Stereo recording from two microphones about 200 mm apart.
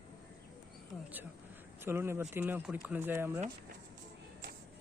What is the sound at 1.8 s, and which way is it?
Speech, 10° right (ahead or behind).